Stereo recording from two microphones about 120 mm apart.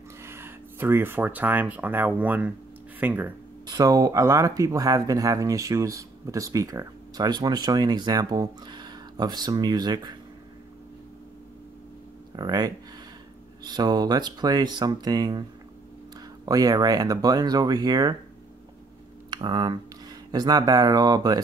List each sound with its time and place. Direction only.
0.2 s speech: 20° right (ahead or behind)
3.6 s speech: 30° right (ahead or behind)
12.4 s speech: 35° right (ahead or behind)
16.4 s speech: 30° right (ahead or behind)
19.3 s speech: 35° right (ahead or behind)